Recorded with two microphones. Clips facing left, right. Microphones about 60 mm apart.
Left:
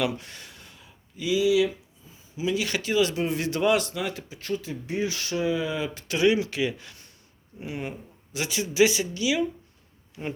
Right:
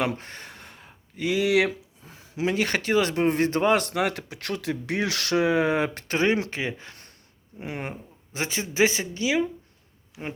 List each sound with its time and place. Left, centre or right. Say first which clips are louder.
0.0 s a sound: even; right
2.5 s speech: right 2 dB; right
3.8 s speech: right 5 dB; right